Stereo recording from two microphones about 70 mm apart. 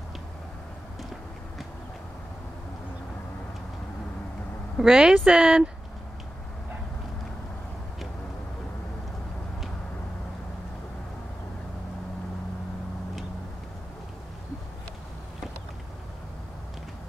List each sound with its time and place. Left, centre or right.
4.7 s speech: centre